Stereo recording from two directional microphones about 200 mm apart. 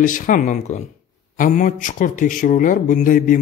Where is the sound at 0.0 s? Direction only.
40° left (ahead or behind).